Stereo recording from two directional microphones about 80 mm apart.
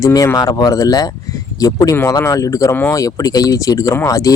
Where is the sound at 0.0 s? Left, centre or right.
Left.